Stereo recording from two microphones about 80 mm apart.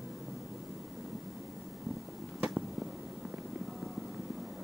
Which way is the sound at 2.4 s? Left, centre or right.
Centre.